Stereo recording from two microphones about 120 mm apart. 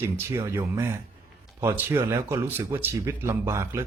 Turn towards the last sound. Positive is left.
turn(degrees=-20)  # may be behind; listen again after turning